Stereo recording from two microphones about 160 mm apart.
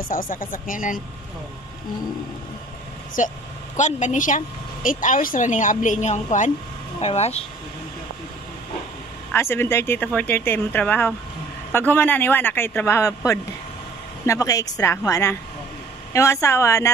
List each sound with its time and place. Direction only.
0.1 s speech: 60° left (ahead or behind)
3.2 s a woman's voice: 55° left (ahead or behind)
9.3 s a woman's voice: 15° left (ahead or behind)